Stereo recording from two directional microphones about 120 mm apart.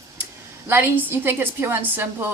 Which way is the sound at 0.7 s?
20° right (ahead or behind).